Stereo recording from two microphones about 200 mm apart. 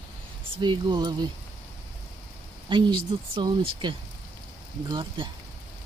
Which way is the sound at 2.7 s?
25° right (ahead or behind).